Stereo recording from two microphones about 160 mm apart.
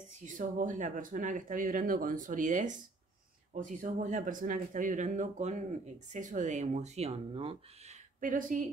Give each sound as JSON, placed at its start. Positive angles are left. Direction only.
{"t": 0.2, "sound": "speech", "side_deg": -55}
{"t": 8.2, "sound": "speech", "side_deg": -55}